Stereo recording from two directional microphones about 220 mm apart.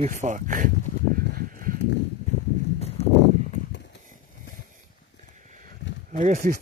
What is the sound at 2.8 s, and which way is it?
Horse, 30° left (ahead or behind).